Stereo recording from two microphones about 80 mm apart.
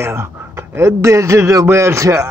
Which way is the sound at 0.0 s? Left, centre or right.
Right.